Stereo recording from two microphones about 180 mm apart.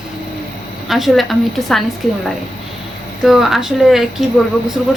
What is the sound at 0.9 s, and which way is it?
Speech, centre (ahead or behind).